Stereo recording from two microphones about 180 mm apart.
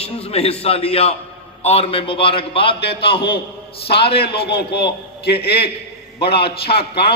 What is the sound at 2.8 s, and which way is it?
Speech, 65° left (ahead or behind).